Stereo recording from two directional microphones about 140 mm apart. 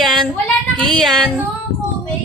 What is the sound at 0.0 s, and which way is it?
Child singing, centre (ahead or behind).